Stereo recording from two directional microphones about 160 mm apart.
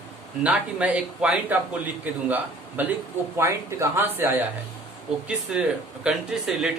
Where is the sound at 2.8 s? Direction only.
10° right (ahead or behind).